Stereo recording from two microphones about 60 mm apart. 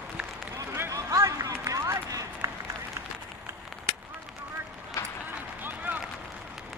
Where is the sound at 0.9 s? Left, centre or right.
Right.